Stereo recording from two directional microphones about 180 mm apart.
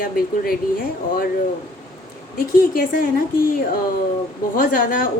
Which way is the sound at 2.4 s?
50° left (ahead or behind).